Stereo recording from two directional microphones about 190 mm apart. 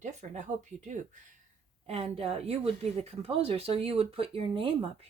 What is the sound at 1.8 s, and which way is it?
Speech, 35° right (ahead or behind).